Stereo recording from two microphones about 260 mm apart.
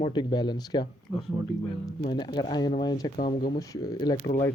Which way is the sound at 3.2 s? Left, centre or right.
Left.